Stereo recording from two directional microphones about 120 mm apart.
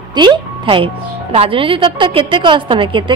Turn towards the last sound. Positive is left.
turn(degrees=-45)  # may be behind; listen again after turning